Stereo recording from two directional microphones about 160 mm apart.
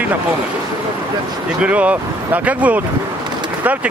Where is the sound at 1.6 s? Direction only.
10° right (ahead or behind).